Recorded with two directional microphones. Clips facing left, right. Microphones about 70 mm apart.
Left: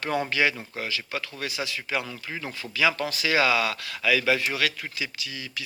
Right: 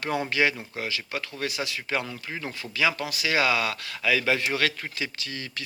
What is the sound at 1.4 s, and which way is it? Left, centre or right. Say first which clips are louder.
Speech: right 3 dB; left.